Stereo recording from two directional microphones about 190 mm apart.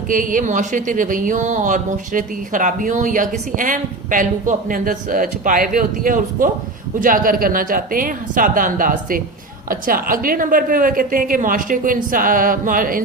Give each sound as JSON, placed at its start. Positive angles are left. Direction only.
{"t": 0.1, "sound": "speech", "side_deg": -45}